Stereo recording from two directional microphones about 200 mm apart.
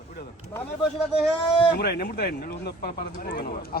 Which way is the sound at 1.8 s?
50° left (ahead or behind).